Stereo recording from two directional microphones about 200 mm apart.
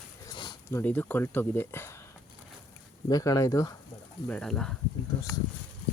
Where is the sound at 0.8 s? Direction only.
10° left (ahead or behind).